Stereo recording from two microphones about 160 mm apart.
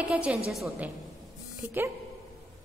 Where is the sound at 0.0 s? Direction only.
10° right (ahead or behind).